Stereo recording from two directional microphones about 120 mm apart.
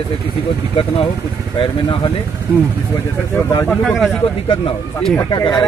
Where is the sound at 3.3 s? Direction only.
20° left (ahead or behind).